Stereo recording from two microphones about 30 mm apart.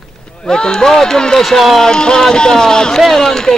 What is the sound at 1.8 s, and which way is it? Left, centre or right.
Speech, left.